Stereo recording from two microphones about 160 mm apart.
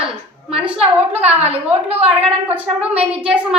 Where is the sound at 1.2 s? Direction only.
40° right (ahead or behind).